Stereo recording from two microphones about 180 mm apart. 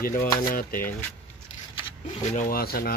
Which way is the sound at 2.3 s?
50° left (ahead or behind).